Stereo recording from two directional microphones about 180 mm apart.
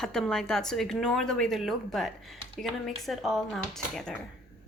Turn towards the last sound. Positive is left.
turn(degrees=0)  # may be behind; listen again after turning